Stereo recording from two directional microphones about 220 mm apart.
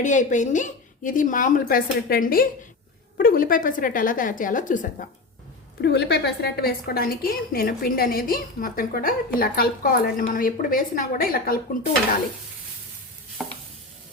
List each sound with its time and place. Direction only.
0.0 s a woman's voice: 35° left (ahead or behind)
5.8 s a woman's voice: 50° left (ahead or behind)
13.4 s stir: centre (ahead or behind)